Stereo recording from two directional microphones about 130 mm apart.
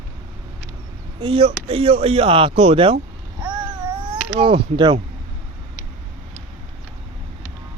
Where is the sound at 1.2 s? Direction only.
45° right (ahead or behind).